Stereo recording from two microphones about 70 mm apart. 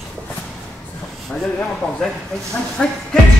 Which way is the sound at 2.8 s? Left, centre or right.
Centre.